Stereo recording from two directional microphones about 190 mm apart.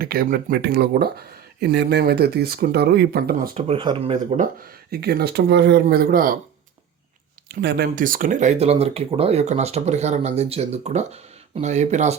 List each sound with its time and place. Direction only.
0.0 s speech: 50° right (ahead or behind)
3.6 s speech: 30° right (ahead or behind)
4.9 s speech: 55° right (ahead or behind)
7.4 s speech: 60° right (ahead or behind); by 12.1 s 35° right (ahead or behind)